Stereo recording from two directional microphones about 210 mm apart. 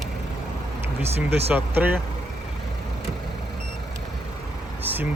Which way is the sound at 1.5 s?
10° right (ahead or behind).